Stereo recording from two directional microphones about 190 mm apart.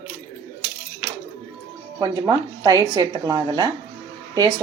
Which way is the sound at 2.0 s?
20° right (ahead or behind).